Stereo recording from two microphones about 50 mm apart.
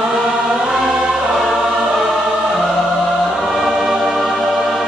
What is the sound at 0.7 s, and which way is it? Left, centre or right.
Choir, centre.